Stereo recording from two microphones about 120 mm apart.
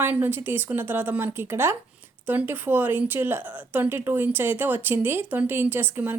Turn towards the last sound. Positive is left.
turn(degrees=-20)  # may be behind; listen again after turning